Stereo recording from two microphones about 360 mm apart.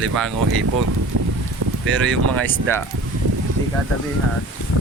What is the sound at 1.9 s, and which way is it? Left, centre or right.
Speech, centre.